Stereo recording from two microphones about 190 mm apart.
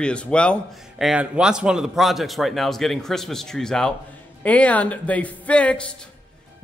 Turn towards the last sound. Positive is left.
turn(degrees=5)  # may be behind; listen again after turning